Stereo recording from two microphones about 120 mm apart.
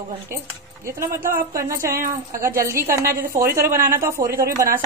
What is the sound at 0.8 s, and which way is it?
Speech, 25° right (ahead or behind).